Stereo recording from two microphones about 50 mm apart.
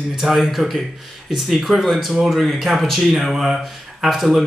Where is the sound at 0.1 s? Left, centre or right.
Centre.